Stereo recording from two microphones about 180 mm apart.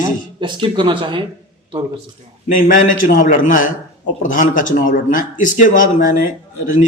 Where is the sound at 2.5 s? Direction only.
45° left (ahead or behind).